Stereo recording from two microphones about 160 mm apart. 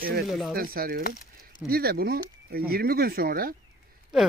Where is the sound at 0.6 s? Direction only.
65° right (ahead or behind).